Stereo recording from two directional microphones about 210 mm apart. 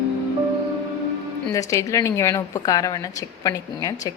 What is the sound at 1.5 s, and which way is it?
A woman's voice, 15° left (ahead or behind).